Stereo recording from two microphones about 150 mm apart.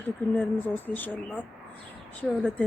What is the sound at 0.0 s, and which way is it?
Speech, 15° left (ahead or behind).